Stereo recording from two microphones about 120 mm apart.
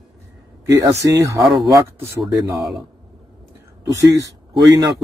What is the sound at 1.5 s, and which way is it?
Speech, 5° right (ahead or behind).